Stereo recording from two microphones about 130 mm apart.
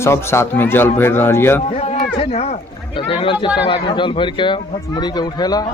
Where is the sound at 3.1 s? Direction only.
40° left (ahead or behind).